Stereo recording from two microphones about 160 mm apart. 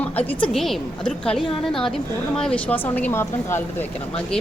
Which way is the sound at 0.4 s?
Centre (ahead or behind).